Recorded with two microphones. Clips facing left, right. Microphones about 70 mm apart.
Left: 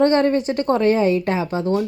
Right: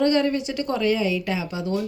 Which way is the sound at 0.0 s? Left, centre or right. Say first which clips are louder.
Left 5 dB; left.